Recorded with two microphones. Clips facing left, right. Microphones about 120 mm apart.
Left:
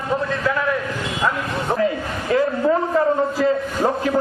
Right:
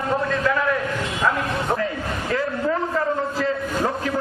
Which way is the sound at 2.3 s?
25° left (ahead or behind).